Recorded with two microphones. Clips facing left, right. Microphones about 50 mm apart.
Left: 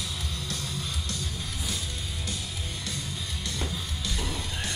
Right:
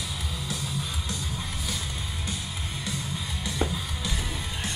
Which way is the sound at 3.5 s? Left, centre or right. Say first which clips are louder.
Right 6 dB; centre.